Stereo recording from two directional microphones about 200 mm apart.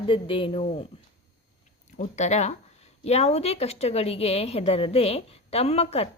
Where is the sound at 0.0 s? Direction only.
25° left (ahead or behind).